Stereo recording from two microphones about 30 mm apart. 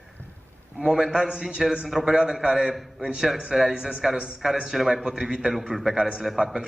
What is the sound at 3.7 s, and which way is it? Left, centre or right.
Speech, right.